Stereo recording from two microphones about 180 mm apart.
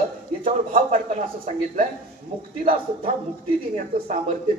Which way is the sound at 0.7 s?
50° right (ahead or behind).